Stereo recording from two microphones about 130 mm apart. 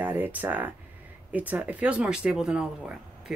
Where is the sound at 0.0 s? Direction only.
15° right (ahead or behind).